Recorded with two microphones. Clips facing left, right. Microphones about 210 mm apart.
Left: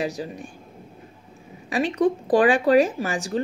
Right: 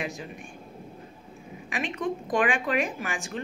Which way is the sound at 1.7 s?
35° left (ahead or behind).